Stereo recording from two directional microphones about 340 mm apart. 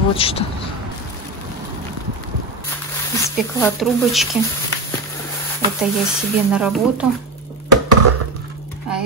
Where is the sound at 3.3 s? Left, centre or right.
Centre.